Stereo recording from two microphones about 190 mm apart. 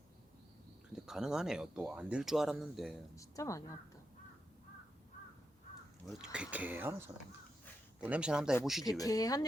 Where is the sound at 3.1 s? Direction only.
15° left (ahead or behind).